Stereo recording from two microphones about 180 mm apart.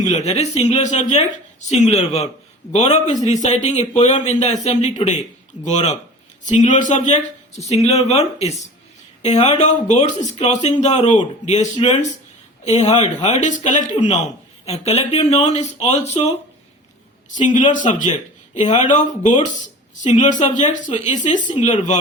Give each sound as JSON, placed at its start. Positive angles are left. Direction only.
{"t": 0.1, "sound": "a woman's voice", "side_deg": 35}
{"t": 13.2, "sound": "a woman's voice", "side_deg": 40}
{"t": 17.3, "sound": "a woman's voice", "side_deg": 45}